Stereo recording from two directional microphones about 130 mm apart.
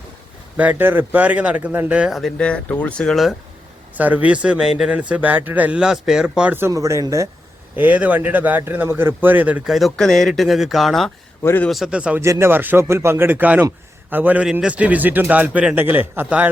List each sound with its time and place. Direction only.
0.5 s a man's voice: 10° right (ahead or behind)
3.9 s a man's voice: 10° right (ahead or behind)
7.8 s a man's voice: 15° right (ahead or behind)
11.4 s a man's voice: 15° left (ahead or behind)
11.7 s a man's voice: 5° right (ahead or behind)
12.2 s a man's voice: 20° right (ahead or behind)